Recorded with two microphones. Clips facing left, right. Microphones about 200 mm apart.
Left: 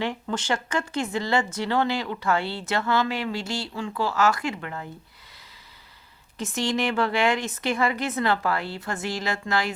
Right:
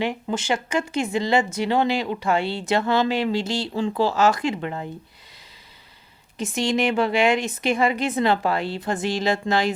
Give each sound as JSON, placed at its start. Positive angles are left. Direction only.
{"t": 0.0, "sound": "speech", "side_deg": -15}
{"t": 3.7, "sound": "speech", "side_deg": -35}
{"t": 4.1, "sound": "a woman's voice", "side_deg": -20}
{"t": 6.3, "sound": "a woman's voice", "side_deg": -15}